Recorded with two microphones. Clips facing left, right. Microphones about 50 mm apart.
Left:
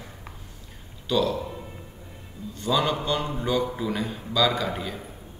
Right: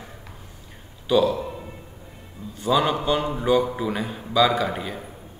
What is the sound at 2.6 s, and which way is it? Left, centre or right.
A man's voice, centre.